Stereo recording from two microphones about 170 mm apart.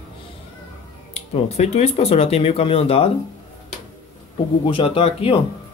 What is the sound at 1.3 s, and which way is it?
Speech, 40° left (ahead or behind).